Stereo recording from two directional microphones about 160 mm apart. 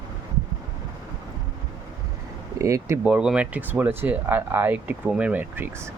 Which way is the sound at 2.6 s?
20° right (ahead or behind).